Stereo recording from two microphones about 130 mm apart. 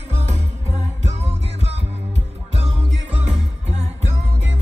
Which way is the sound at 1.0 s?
55° right (ahead or behind).